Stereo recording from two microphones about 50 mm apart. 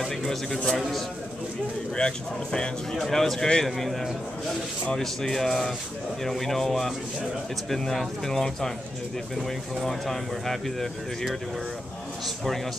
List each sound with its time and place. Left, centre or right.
0.0 s speech: centre
2.0 s speech: centre
3.6 s speech: centre
9.8 s speech: centre